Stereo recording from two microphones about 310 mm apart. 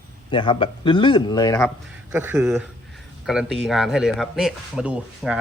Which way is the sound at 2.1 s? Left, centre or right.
Centre.